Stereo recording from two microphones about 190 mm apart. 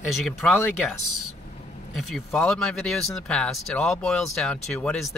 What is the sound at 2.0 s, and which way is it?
Speech, centre (ahead or behind).